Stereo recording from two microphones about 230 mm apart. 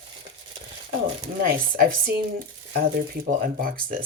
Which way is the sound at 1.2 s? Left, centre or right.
Right.